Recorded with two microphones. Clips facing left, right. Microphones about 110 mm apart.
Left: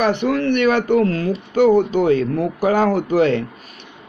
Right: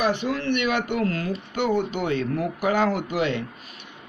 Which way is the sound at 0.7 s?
35° left (ahead or behind).